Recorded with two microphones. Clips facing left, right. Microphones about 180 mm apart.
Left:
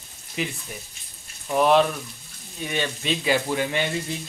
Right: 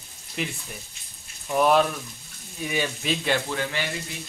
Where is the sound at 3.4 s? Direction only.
20° left (ahead or behind).